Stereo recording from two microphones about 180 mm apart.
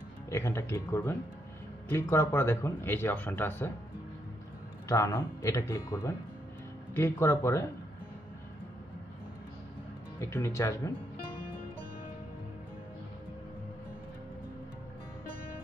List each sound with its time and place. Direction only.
0.3 s speech: 15° left (ahead or behind)
4.8 s speech: 15° left (ahead or behind)
10.3 s speech: 15° left (ahead or behind)